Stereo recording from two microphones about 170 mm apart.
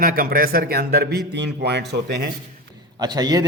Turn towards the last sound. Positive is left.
turn(degrees=-25)  # may be behind; listen again after turning